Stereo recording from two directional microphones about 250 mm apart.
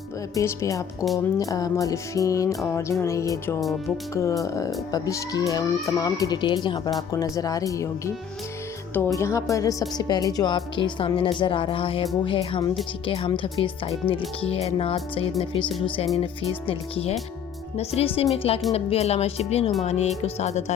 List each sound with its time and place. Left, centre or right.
0.3 s speech: centre